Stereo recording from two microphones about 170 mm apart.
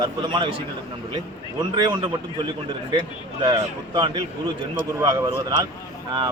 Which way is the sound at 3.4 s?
30° right (ahead or behind).